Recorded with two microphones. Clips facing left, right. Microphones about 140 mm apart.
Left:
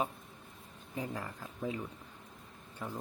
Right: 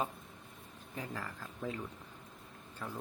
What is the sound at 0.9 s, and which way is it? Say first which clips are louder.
Speech: left 3 dB; 20° left (ahead or behind).